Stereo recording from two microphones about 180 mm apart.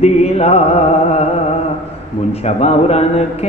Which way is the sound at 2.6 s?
35° left (ahead or behind).